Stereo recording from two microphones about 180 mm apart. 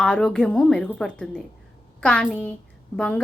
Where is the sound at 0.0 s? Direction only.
5° left (ahead or behind).